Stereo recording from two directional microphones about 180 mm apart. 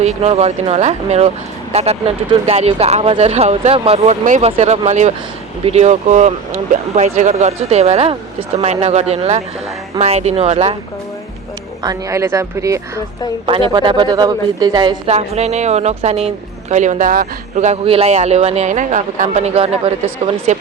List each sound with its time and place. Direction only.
0.0 s a woman's voice: 35° right (ahead or behind)
11.8 s speech: 20° right (ahead or behind)
13.4 s a woman's voice: 30° right (ahead or behind)
15.0 s a woman's voice: 35° right (ahead or behind)